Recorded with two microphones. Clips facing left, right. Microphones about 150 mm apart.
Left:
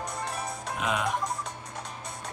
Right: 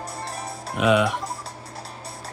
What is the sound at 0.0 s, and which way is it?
Music, 35° right (ahead or behind).